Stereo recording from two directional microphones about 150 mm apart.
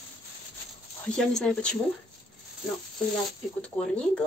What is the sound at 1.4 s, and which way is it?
Speech, 5° left (ahead or behind).